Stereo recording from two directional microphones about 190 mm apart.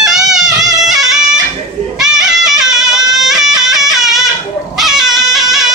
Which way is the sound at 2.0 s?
Centre (ahead or behind).